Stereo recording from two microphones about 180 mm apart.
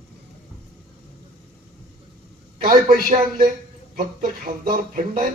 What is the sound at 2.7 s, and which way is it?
Speech, 50° right (ahead or behind).